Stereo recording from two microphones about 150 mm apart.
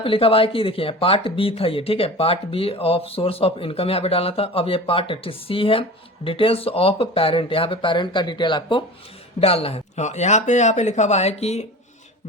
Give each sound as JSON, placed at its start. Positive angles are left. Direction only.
{"t": 0.0, "sound": "speech", "side_deg": 35}